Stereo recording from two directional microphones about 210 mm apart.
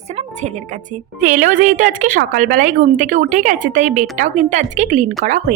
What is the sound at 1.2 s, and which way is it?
A woman's voice, 40° right (ahead or behind).